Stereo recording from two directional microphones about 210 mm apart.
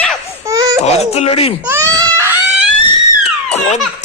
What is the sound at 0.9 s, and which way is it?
Speech, 30° left (ahead or behind).